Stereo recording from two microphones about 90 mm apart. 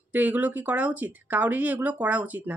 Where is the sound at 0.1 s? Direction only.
20° right (ahead or behind).